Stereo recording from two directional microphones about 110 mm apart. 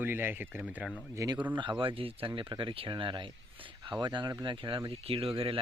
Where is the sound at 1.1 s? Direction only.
35° right (ahead or behind).